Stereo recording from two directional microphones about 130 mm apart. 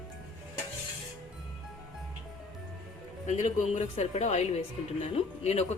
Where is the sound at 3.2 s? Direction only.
65° left (ahead or behind).